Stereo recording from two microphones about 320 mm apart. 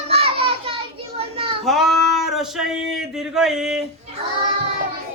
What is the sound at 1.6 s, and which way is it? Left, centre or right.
A man's voice, centre.